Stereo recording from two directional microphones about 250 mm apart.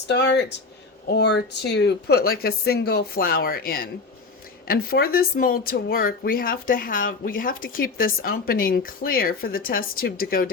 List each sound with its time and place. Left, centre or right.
0.1 s speech: left